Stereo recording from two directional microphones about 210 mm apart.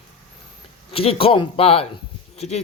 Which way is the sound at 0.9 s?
25° left (ahead or behind).